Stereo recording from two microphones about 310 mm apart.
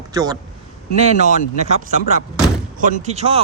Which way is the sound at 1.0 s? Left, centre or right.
Right.